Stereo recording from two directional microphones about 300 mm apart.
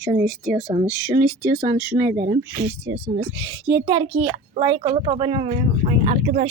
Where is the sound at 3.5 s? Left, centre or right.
Centre.